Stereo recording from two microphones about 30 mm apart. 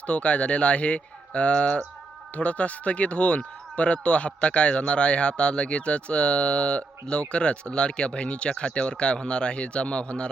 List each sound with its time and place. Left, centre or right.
0.1 s speech: left